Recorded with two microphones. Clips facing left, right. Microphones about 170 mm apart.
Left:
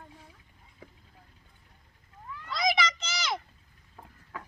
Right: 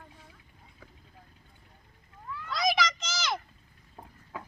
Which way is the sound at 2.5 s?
Centre (ahead or behind).